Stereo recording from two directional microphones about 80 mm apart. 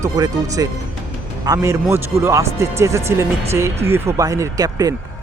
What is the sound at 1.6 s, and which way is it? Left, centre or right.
Speech, right.